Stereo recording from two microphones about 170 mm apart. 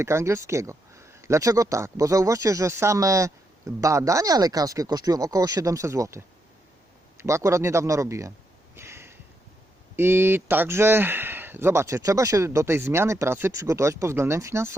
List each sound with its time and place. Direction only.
0.0 s speech: 15° right (ahead or behind)
8.7 s a sound: 15° right (ahead or behind)
9.9 s speech: 15° right (ahead or behind)